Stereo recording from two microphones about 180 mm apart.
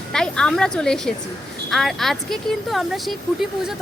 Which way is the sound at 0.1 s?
5° left (ahead or behind).